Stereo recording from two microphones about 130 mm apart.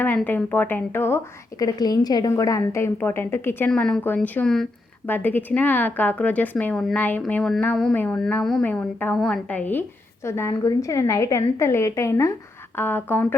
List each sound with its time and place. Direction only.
0.3 s a woman's voice: 15° left (ahead or behind)
1.5 s a woman's voice: 30° left (ahead or behind)
3.7 s a woman's voice: 5° left (ahead or behind)
5.0 s a woman's voice: 15° left (ahead or behind)